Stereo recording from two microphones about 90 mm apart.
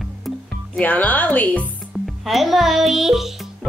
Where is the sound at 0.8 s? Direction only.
20° left (ahead or behind).